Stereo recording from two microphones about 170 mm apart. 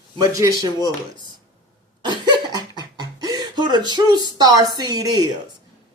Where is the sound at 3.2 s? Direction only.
25° right (ahead or behind).